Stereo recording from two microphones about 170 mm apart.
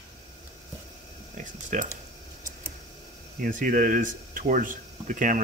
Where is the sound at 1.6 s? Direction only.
50° right (ahead or behind).